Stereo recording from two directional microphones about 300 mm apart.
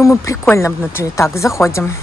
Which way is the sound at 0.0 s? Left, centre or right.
Centre.